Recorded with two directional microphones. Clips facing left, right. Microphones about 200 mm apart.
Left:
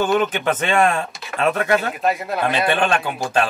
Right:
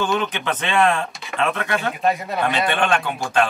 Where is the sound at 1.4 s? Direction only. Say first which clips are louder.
Left 4 dB; 40° left (ahead or behind).